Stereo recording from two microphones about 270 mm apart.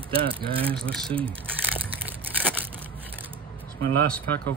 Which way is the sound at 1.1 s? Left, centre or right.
Centre.